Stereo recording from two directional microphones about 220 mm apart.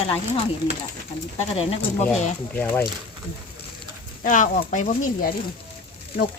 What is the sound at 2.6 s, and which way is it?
Speech, 10° left (ahead or behind).